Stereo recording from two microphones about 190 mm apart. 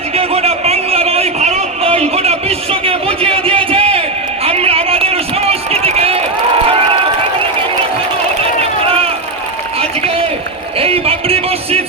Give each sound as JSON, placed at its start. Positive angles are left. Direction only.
{"t": 0.1, "sound": "a sound", "side_deg": -30}
{"t": 4.4, "sound": "run", "side_deg": -30}
{"t": 10.8, "sound": "music", "side_deg": -30}